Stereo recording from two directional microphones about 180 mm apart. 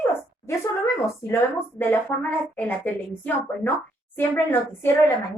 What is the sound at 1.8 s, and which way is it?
A woman's voice, 10° left (ahead or behind).